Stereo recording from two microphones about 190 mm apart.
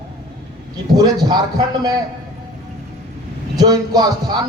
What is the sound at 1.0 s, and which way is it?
Speech, 20° right (ahead or behind).